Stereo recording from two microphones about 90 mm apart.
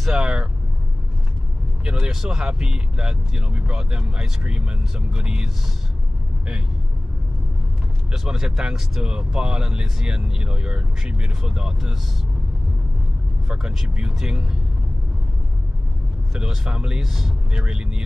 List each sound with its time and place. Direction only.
0.0 s vehicle: 5° right (ahead or behind)
1.9 s speech: 10° right (ahead or behind)
8.1 s speech: 5° right (ahead or behind)
13.5 s speech: 5° right (ahead or behind)
16.3 s speech: 10° right (ahead or behind)